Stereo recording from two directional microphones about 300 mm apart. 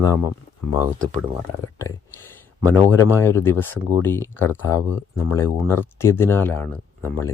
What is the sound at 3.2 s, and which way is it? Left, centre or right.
Speech, centre.